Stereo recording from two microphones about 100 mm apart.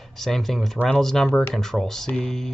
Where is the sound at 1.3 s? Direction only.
15° left (ahead or behind).